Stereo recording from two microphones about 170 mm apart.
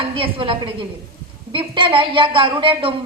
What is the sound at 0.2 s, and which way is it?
A woman's voice, 30° right (ahead or behind).